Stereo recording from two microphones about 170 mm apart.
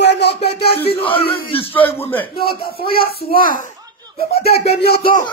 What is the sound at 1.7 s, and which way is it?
Speech, 10° left (ahead or behind).